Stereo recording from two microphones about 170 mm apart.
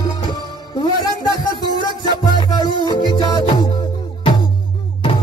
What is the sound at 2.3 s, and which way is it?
Music, 25° left (ahead or behind).